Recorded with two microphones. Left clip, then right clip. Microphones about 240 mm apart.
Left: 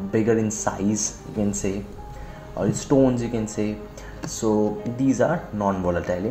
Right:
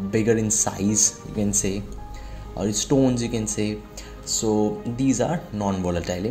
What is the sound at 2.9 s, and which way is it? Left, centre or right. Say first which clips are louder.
Speech: left 2 dB; right.